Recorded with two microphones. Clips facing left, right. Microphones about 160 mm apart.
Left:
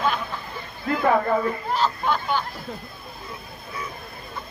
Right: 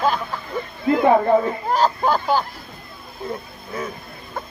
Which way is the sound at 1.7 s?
40° right (ahead or behind).